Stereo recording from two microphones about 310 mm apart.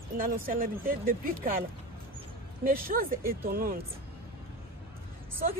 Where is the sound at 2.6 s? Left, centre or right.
Right.